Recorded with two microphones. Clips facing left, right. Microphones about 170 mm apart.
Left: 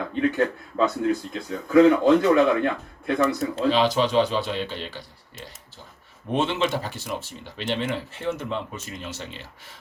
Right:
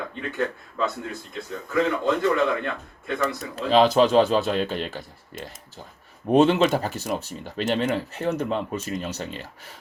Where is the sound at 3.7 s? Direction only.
40° right (ahead or behind).